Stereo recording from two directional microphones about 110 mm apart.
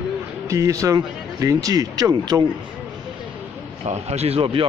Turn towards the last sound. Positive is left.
turn(degrees=-55)  # may be behind; listen again after turning